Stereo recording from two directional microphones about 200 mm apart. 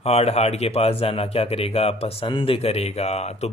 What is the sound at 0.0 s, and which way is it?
Speech, 30° left (ahead or behind).